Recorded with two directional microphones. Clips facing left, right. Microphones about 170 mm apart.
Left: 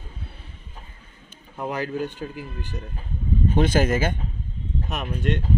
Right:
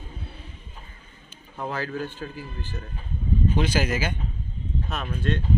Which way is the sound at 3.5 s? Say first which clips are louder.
Left 7 dB; 50° left (ahead or behind).